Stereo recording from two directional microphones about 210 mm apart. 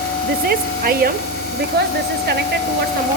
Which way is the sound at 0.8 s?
45° right (ahead or behind).